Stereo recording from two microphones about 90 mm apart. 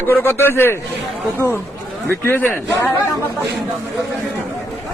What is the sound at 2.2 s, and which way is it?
Speech, 25° left (ahead or behind).